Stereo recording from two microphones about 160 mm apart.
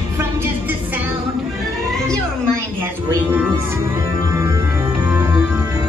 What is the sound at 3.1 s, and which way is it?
Music, 15° right (ahead or behind).